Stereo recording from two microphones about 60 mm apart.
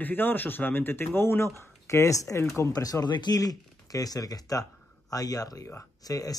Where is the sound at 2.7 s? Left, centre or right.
Left.